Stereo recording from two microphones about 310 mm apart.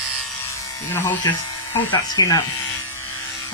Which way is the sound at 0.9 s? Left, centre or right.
Centre.